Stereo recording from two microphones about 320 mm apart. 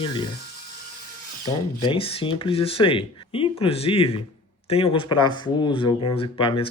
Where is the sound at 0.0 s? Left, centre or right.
Centre.